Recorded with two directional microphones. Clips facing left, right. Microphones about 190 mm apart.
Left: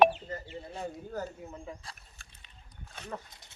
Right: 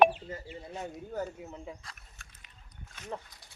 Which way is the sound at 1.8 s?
30° left (ahead or behind).